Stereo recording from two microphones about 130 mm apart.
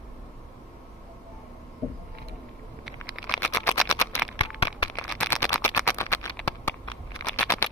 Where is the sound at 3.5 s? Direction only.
25° left (ahead or behind).